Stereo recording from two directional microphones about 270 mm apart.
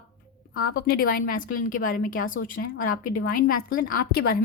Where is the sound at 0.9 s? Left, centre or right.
Left.